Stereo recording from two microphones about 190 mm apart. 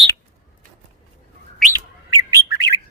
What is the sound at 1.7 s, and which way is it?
Bird, 20° right (ahead or behind).